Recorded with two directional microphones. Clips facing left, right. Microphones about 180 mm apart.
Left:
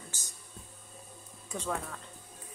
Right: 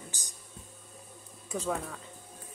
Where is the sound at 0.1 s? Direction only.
15° right (ahead or behind).